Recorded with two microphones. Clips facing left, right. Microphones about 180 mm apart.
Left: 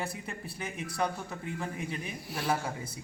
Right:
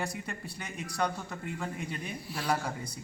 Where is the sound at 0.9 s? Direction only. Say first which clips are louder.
Right 1 dB; 5° left (ahead or behind).